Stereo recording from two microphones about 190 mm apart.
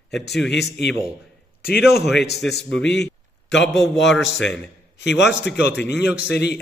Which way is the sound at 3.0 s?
70° left (ahead or behind).